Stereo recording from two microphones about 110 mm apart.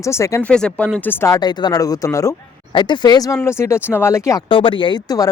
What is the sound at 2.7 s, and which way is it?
Speech, 45° left (ahead or behind).